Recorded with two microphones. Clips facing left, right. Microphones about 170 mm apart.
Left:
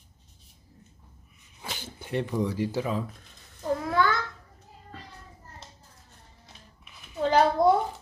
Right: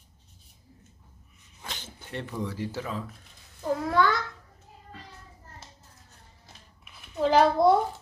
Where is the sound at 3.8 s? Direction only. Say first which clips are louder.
Right 2 dB; centre (ahead or behind).